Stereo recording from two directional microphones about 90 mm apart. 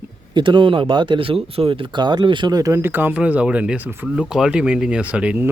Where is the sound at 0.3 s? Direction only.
65° right (ahead or behind).